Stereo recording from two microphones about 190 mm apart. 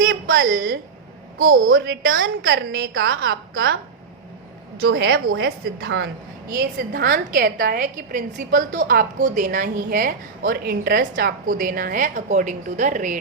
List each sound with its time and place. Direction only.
0.0 s a sound: 75° right (ahead or behind)
0.5 s a woman's voice: 60° right (ahead or behind)
1.6 s a woman's voice: 80° right
2.0 s a woman's voice: 90° right; by 3.1 s 55° right (ahead or behind)
3.1 s a woman's voice: 90° right
4.9 s a woman's voice: 80° right
6.5 s a woman's voice: 55° right (ahead or behind)